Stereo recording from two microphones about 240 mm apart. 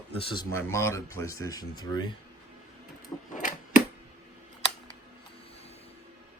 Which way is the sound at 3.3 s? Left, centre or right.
Left.